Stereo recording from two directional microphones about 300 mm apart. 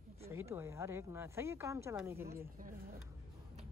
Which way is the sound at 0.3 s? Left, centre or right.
Centre.